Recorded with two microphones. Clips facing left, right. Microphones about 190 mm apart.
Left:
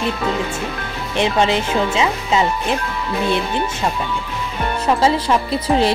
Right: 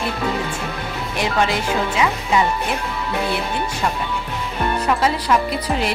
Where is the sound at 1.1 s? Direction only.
25° left (ahead or behind).